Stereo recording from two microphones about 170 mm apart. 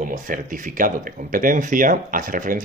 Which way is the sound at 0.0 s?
50° right (ahead or behind).